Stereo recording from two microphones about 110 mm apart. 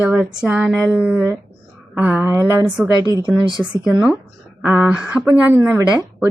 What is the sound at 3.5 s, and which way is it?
Speech, 45° right (ahead or behind).